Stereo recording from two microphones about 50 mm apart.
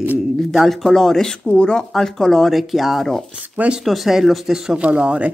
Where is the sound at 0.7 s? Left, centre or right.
Centre.